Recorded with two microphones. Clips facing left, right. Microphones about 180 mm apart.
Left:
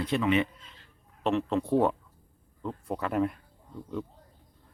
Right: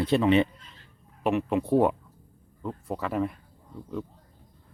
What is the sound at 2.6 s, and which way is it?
Speech, centre (ahead or behind).